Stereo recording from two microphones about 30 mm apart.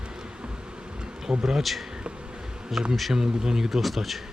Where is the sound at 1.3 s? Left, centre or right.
Right.